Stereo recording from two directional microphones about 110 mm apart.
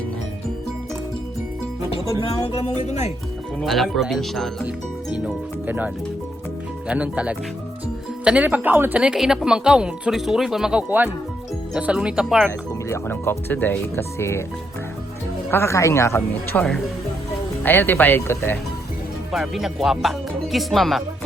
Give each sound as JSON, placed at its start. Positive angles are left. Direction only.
{"t": 2.5, "sound": "speech", "side_deg": 65}
{"t": 3.6, "sound": "speech", "side_deg": 0}
{"t": 5.1, "sound": "speech", "side_deg": -15}
{"t": 12.9, "sound": "speech", "side_deg": 20}
{"t": 15.4, "sound": "speech", "side_deg": 25}
{"t": 19.3, "sound": "speech", "side_deg": 0}